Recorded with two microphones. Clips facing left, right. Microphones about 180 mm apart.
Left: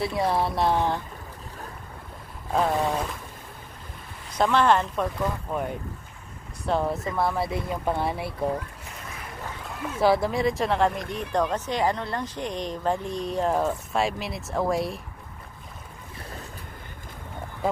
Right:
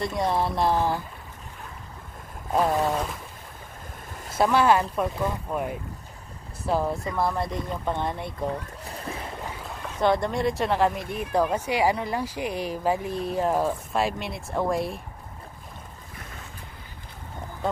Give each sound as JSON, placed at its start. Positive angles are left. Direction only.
{"t": 0.0, "sound": "speech", "side_deg": 5}
{"t": 2.5, "sound": "speech", "side_deg": -5}
{"t": 4.4, "sound": "speech", "side_deg": -10}
{"t": 8.8, "sound": "boat", "side_deg": -35}
{"t": 9.9, "sound": "speech", "side_deg": 5}
{"t": 16.2, "sound": "boat", "side_deg": 35}